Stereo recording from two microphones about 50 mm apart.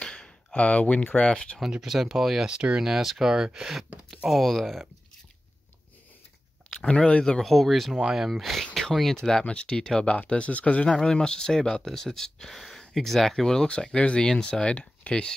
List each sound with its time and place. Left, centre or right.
0.0 s speech: left
1.8 s speech: centre
2.4 s speech: centre
2.8 s speech: centre
4.3 s speech: centre
6.7 s speech: centre
7.4 s speech: centre; by 11.0 s left
11.0 s speech: centre
13.7 s speech: left